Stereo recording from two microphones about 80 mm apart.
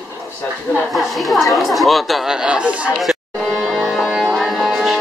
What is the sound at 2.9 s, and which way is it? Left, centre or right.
Music, centre.